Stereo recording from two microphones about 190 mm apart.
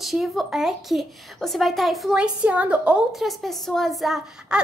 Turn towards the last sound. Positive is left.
turn(degrees=-5)  # may be behind; listen again after turning